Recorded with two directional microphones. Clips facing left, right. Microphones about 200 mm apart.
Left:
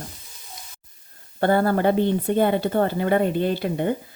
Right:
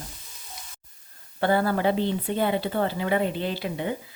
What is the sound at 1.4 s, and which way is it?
Speech, 50° left (ahead or behind).